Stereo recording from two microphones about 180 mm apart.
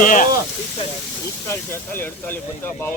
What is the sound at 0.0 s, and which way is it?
Speech, 50° left (ahead or behind).